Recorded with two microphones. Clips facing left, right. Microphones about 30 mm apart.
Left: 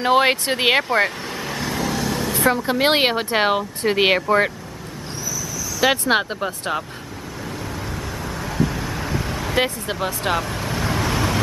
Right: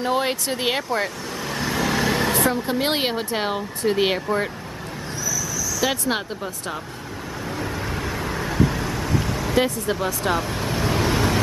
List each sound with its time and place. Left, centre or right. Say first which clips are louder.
0.0 s speech: left 6 dB; left
1.4 s vehicle: right 1 dB; centre
2.0 s vehicle: right 3 dB; right
2.5 s speech: left 4 dB; left
5.8 s speech: left 6 dB; left
8.4 s vehicle: right 1 dB; centre
9.4 s speech: left 1 dB; centre
10.4 s vehicle: even; centre